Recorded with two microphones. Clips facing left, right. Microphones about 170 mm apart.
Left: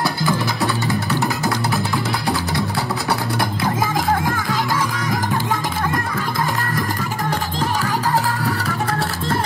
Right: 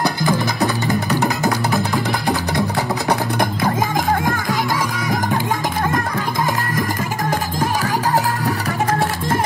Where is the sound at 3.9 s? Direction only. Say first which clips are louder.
Right 1 dB; 45° right (ahead or behind).